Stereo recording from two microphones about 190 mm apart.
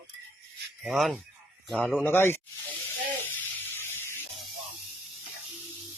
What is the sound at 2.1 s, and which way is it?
Speech, 10° left (ahead or behind).